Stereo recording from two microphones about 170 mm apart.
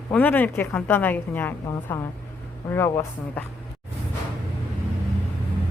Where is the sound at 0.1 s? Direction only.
10° left (ahead or behind).